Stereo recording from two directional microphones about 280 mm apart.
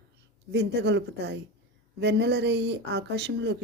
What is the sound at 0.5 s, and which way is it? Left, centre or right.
Speech, right.